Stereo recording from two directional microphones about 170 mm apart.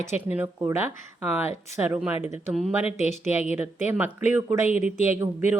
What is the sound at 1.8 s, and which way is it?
Speech, 10° right (ahead or behind).